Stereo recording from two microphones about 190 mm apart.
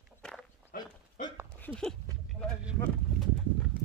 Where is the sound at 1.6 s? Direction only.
5° left (ahead or behind).